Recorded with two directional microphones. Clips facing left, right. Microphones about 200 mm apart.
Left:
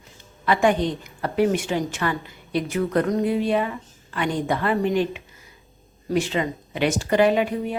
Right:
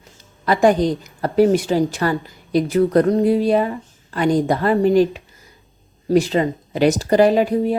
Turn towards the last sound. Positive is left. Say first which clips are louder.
# right 5 dB
turn(degrees=-35)  # may be behind; listen again after turning